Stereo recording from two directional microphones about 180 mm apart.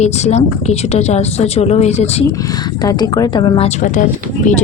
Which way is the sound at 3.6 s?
45° left (ahead or behind).